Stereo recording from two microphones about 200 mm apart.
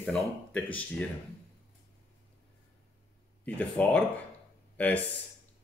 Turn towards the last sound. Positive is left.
turn(degrees=5)  # may be behind; listen again after turning